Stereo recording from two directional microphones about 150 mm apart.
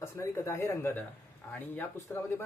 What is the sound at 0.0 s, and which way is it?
Speech, 20° left (ahead or behind).